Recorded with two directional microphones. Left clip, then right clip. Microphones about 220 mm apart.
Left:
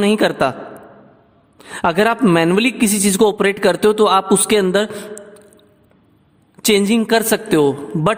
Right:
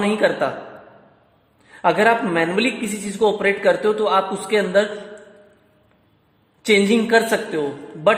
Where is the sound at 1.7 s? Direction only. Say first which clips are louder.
Left 1 dB; 40° left (ahead or behind).